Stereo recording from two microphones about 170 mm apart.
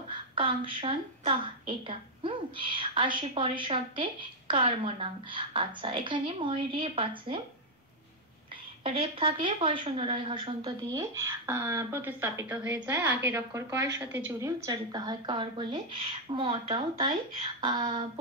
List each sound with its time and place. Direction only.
0.1 s a woman's voice: 30° right (ahead or behind)
8.8 s a woman's voice: 35° right (ahead or behind)